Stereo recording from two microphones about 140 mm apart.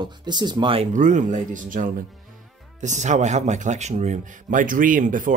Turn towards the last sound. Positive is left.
turn(degrees=-70)  # may be behind; listen again after turning